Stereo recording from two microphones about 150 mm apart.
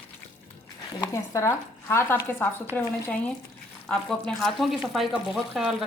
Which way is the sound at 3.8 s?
5° left (ahead or behind).